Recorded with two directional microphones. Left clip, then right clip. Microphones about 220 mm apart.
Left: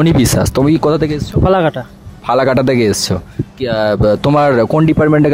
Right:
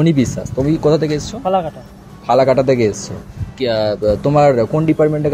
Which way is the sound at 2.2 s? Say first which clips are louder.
Even; 40° left (ahead or behind).